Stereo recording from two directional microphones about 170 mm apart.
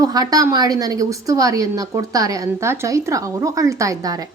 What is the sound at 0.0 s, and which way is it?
A woman's voice, 20° right (ahead or behind).